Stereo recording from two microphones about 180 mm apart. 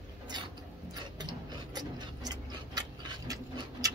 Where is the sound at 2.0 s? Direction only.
20° right (ahead or behind).